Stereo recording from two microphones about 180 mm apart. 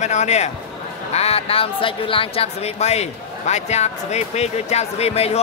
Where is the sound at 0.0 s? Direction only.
40° left (ahead or behind).